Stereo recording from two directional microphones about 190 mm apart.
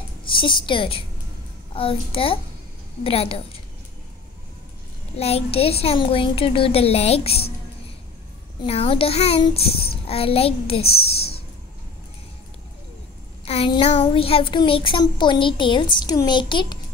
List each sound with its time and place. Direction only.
0.3 s a child's voice: 25° left (ahead or behind)
5.1 s a woman's voice: 30° left (ahead or behind)
8.6 s a woman's voice: 30° left (ahead or behind)
13.5 s a child's voice: 30° left (ahead or behind)